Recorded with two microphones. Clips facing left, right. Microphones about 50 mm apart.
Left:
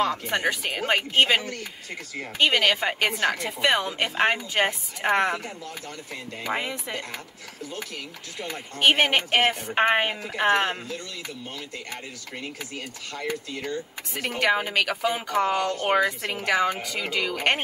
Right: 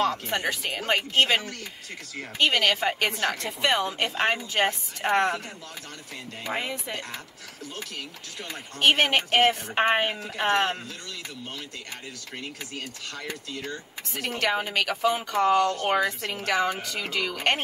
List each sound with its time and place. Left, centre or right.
0.1 s a woman's voice: centre
1.1 s a woman's voice: left
6.5 s speech: centre
8.4 s a woman's voice: left
12.4 s speech: left
14.4 s a woman's voice: centre